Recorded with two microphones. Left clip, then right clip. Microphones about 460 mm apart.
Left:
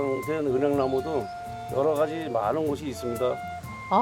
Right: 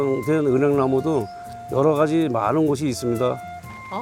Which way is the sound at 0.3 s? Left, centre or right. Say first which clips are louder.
Right 7 dB; right.